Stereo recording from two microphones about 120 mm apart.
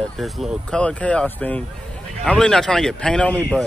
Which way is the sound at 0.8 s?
10° left (ahead or behind).